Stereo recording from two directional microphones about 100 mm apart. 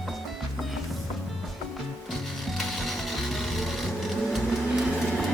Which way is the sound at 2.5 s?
Centre (ahead or behind).